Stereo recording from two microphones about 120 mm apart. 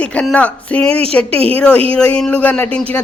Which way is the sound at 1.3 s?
50° right (ahead or behind).